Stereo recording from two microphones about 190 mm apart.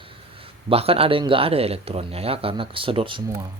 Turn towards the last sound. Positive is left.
turn(degrees=-25)  # may be behind; listen again after turning